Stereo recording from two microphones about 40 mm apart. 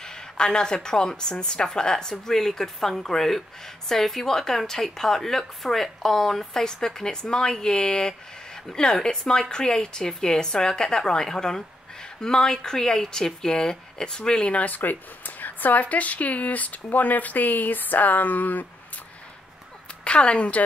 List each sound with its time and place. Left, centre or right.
0.0 s a woman's voice: centre
14.5 s speech: left
20.1 s a woman's voice: left